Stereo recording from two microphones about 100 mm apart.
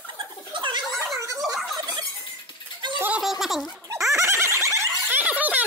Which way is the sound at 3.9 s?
30° right (ahead or behind).